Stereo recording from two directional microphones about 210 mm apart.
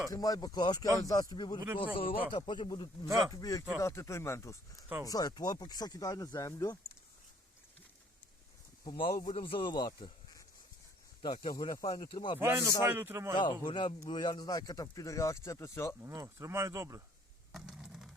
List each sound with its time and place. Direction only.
0.1 s a man's voice: 15° left (ahead or behind)
8.8 s speech: 20° left (ahead or behind)
12.4 s speech: 10° right (ahead or behind)
13.3 s a man's voice: 20° left (ahead or behind)
16.0 s speech: 15° right (ahead or behind)
17.5 s a sound: 5° right (ahead or behind)